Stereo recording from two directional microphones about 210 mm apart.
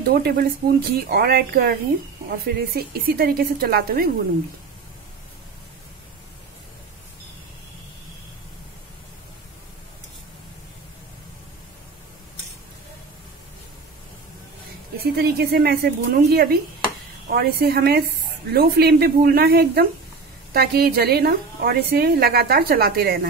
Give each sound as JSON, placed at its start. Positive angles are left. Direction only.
{"t": 0.1, "sound": "a woman's voice", "side_deg": -45}
{"t": 15.1, "sound": "a woman's voice", "side_deg": -45}